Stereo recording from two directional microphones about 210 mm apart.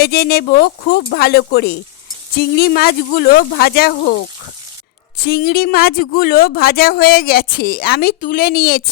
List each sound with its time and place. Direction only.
0.0 s speech: 50° left (ahead or behind)
5.1 s speech: 45° left (ahead or behind)